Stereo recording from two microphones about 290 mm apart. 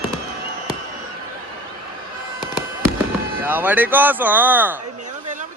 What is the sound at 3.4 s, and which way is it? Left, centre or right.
Speech, centre.